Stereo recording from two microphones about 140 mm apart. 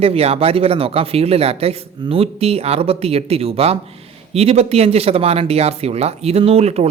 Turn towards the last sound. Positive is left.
turn(degrees=-50)  # may be behind; listen again after turning